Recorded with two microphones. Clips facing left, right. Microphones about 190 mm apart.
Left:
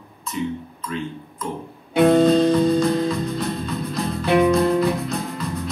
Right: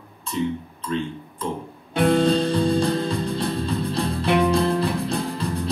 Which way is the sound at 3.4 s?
30° right (ahead or behind).